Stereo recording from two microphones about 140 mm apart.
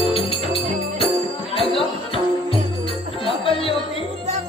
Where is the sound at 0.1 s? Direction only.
40° left (ahead or behind).